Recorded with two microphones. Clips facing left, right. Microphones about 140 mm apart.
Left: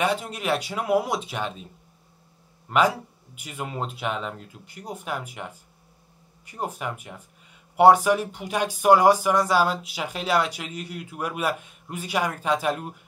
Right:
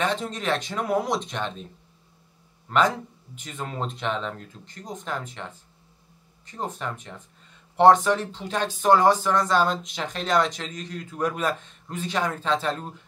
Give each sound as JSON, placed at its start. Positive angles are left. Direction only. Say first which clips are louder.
{"t": 0.0, "sound": "speech", "louder": "left 1 dB", "side_deg": 10}
{"t": 2.7, "sound": "speech", "louder": "left 1 dB", "side_deg": 10}